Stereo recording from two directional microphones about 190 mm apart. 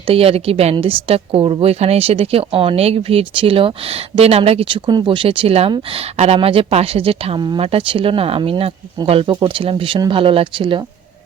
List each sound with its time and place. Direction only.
0.1 s a woman's voice: 30° right (ahead or behind)